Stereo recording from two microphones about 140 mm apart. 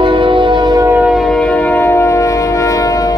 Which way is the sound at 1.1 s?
Centre (ahead or behind).